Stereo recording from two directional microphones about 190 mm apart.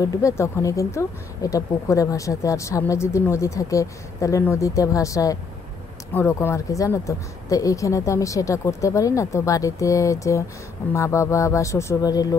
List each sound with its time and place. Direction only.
0.0 s speech: 15° left (ahead or behind)